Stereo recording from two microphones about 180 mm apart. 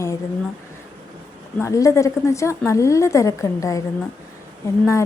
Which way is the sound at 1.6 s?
15° left (ahead or behind).